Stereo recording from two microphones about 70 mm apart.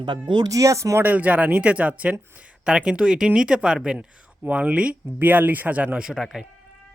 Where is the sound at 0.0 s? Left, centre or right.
Right.